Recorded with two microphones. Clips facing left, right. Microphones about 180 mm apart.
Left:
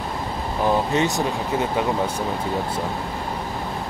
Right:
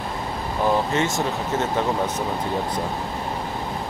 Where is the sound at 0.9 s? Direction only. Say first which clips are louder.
Left 1 dB; 15° left (ahead or behind).